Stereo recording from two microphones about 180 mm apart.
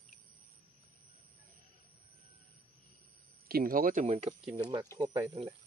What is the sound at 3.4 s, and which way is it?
Speech, 55° right (ahead or behind).